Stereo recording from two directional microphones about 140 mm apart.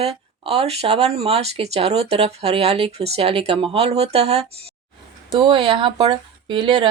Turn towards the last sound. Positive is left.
turn(degrees=-35)  # may be behind; listen again after turning